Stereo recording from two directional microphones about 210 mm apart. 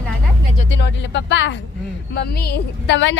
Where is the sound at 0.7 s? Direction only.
55° left (ahead or behind).